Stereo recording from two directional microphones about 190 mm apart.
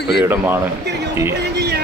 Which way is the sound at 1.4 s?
60° right (ahead or behind).